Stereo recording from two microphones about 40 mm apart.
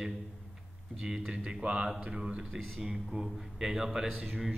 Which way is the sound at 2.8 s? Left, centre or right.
Centre.